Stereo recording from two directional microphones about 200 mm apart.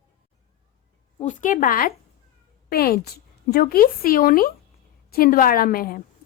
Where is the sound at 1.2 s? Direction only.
40° left (ahead or behind).